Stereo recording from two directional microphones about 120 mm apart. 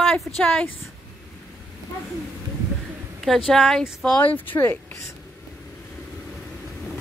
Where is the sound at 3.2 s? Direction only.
Centre (ahead or behind).